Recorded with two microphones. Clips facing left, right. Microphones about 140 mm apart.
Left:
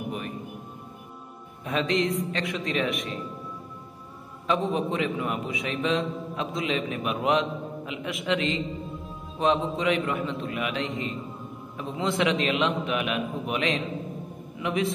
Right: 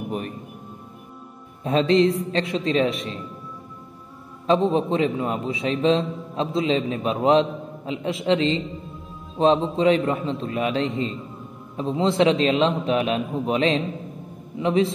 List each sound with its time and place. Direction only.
1.6 s a man's voice: 30° right (ahead or behind)
4.5 s a man's voice: 30° right (ahead or behind)